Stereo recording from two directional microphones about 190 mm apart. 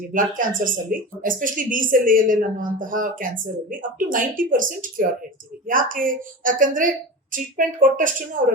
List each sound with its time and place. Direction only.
0.1 s speech: 45° right (ahead or behind)